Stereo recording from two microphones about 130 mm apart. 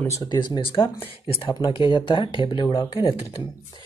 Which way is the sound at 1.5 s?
35° left (ahead or behind).